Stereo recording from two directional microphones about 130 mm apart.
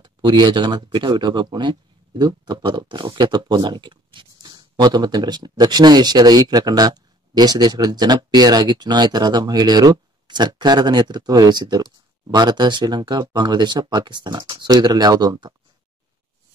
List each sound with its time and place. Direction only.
0.0 s speech: 35° right (ahead or behind)